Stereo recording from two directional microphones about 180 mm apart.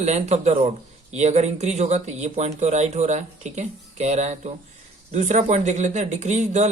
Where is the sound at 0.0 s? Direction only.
40° right (ahead or behind).